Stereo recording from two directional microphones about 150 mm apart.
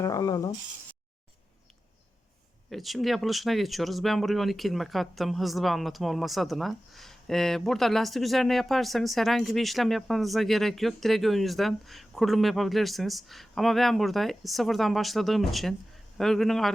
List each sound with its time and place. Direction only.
0.0 s speech: 25° left (ahead or behind)
2.6 s speech: centre (ahead or behind)